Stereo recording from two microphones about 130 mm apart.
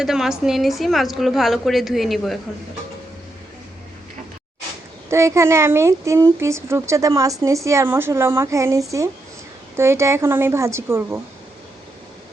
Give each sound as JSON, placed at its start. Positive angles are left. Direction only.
{"t": 0.0, "sound": "a woman's voice", "side_deg": -5}
{"t": 5.0, "sound": "speech", "side_deg": -20}